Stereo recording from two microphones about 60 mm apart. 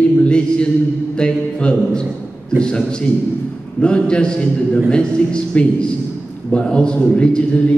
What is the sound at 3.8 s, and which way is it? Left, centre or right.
A man's voice, centre.